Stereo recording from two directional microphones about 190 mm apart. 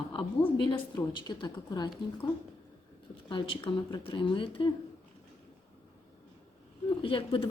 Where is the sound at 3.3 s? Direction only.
25° left (ahead or behind).